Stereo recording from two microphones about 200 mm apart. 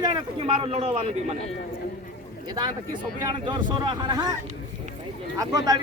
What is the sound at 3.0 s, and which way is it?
Speech, 25° right (ahead or behind).